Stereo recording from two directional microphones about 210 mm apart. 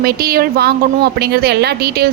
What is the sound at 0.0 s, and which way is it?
A woman's voice, 45° right (ahead or behind).